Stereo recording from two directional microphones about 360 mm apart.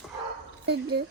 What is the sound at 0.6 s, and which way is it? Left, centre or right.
Speech, right.